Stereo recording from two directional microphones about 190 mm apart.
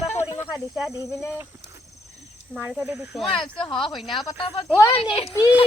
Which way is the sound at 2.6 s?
Centre (ahead or behind).